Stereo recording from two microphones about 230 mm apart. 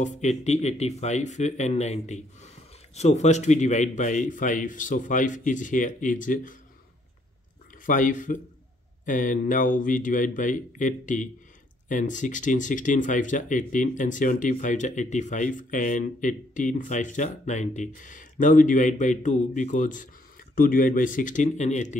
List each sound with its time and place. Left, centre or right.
0.0 s speech: left
7.8 s speech: left